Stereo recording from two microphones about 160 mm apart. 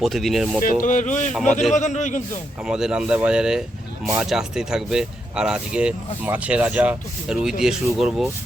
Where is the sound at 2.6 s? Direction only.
5° right (ahead or behind).